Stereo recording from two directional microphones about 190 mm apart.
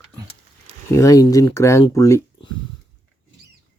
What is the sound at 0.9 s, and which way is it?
Speech, 15° left (ahead or behind).